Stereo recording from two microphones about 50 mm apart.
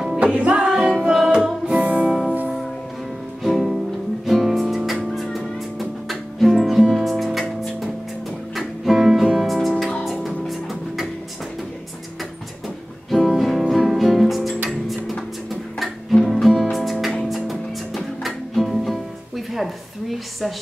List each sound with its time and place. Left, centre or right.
0.2 s music: right
1.0 s music: centre
1.3 s music: right
2.0 s music: centre
4.3 s music: centre
13.1 s music: centre
16.3 s music: centre